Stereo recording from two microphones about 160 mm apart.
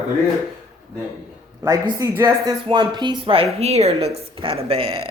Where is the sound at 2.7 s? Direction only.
30° right (ahead or behind).